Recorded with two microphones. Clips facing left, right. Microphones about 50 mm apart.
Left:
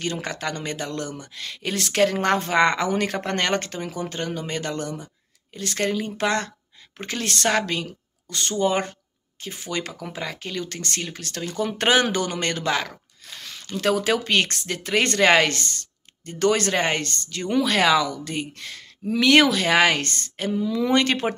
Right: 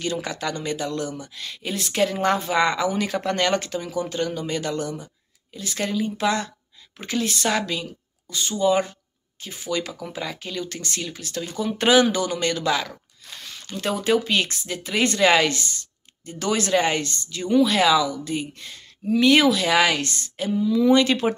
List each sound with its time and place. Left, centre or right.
0.0 s speech: left
13.4 s speech: left
19.4 s speech: left